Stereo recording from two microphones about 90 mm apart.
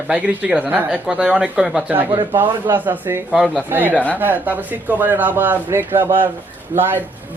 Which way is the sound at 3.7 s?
20° right (ahead or behind).